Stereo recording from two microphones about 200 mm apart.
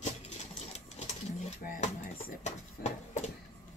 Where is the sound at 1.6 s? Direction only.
45° left (ahead or behind).